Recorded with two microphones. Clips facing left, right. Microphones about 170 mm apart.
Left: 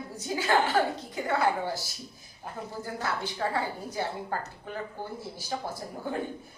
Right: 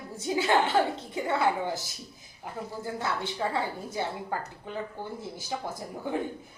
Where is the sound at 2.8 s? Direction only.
25° right (ahead or behind).